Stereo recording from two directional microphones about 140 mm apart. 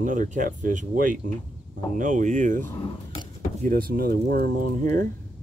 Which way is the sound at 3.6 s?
90° right.